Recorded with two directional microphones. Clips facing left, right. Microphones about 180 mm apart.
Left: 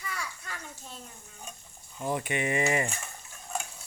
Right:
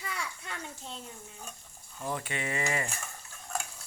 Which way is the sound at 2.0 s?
15° left (ahead or behind).